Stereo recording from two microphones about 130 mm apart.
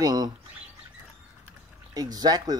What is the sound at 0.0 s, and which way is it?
Speech, 30° right (ahead or behind).